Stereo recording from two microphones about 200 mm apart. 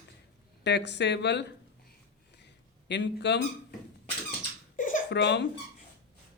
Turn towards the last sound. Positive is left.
turn(degrees=60)  # may be behind; listen again after turning